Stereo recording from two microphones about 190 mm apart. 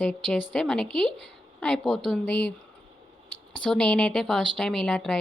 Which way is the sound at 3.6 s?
5° left (ahead or behind).